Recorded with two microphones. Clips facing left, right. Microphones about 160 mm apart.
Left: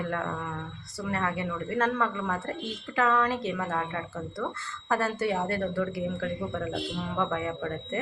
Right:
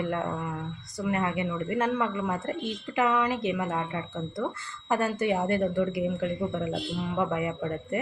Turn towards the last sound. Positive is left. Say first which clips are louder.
# right 1 dB
turn(degrees=-15)  # may be behind; listen again after turning